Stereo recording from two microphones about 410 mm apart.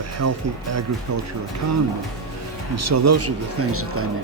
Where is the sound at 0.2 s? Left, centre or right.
Right.